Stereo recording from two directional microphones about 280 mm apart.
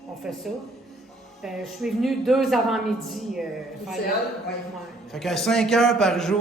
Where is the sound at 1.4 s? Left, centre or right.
Centre.